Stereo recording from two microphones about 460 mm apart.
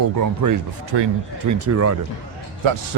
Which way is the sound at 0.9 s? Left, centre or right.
Right.